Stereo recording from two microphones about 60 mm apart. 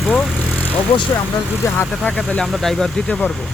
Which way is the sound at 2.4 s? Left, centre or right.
Centre.